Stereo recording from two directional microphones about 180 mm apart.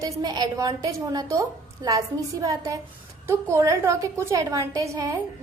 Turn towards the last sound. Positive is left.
turn(degrees=-15)  # may be behind; listen again after turning